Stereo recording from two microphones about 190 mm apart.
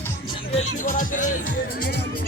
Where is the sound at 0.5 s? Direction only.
45° left (ahead or behind).